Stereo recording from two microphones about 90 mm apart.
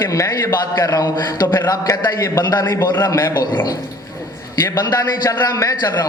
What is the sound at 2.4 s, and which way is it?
A man's voice, 50° left (ahead or behind).